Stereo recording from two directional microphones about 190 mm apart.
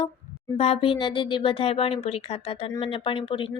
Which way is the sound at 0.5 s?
30° left (ahead or behind).